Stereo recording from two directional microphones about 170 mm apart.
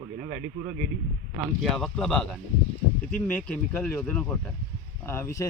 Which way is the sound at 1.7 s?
Centre (ahead or behind).